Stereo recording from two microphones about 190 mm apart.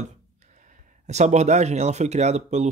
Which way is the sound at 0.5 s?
40° right (ahead or behind).